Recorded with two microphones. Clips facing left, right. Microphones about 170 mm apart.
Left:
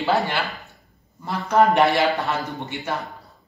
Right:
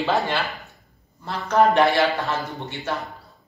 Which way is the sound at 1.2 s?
15° left (ahead or behind).